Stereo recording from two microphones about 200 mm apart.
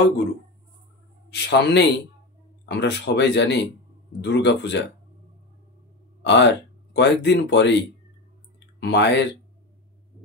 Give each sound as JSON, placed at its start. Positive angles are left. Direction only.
{"t": 1.3, "sound": "speech", "side_deg": 60}
{"t": 6.2, "sound": "speech", "side_deg": 60}
{"t": 8.7, "sound": "speech", "side_deg": 60}